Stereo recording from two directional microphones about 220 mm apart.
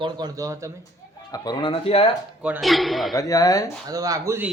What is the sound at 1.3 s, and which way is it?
Speech, 20° left (ahead or behind).